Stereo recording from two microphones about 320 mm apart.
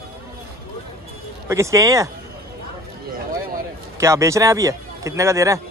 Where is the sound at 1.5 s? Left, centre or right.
Centre.